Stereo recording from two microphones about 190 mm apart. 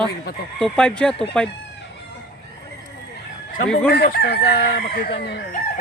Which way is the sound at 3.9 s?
55° left (ahead or behind).